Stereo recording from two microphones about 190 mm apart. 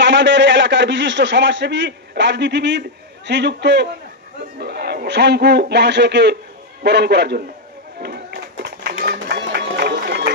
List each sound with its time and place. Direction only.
0.0 s a man's voice: 70° right (ahead or behind)
7.9 s run: 60° right (ahead or behind)